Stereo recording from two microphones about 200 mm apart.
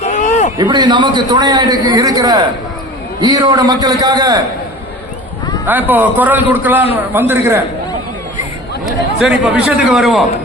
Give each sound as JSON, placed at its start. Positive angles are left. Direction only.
{"t": 0.0, "sound": "a sound", "side_deg": 35}
{"t": 0.6, "sound": "a man's voice", "side_deg": -20}
{"t": 5.6, "sound": "a man's voice", "side_deg": -10}
{"t": 8.9, "sound": "speech", "side_deg": 0}